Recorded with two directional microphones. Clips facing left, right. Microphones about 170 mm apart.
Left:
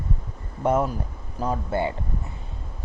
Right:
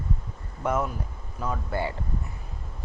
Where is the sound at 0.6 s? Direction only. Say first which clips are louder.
Left 5 dB; 30° left (ahead or behind).